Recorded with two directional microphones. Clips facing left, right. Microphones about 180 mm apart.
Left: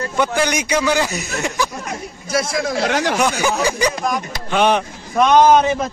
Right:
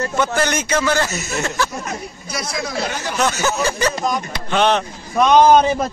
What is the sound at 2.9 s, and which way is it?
Speech, 90° left.